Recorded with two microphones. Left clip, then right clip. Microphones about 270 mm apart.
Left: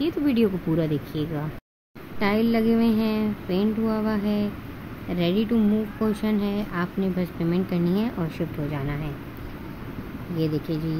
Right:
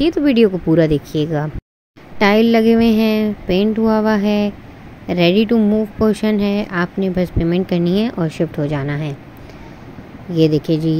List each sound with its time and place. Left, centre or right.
0.0 s speech: right
10.3 s speech: right